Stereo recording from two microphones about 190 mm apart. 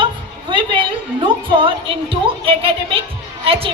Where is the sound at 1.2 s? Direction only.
25° right (ahead or behind).